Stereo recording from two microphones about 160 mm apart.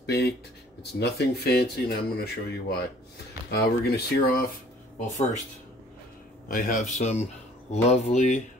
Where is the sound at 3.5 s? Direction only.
80° left.